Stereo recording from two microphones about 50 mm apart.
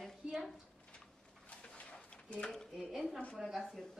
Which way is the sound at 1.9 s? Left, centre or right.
Left.